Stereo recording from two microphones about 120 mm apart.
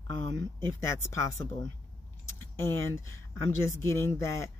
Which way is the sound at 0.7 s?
25° left (ahead or behind).